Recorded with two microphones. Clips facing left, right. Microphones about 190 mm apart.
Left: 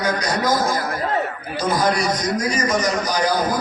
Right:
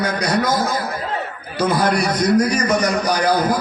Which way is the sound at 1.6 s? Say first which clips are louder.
Right 2 dB; 60° right (ahead or behind).